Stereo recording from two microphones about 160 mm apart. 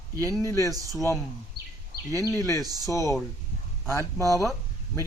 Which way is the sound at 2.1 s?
20° left (ahead or behind).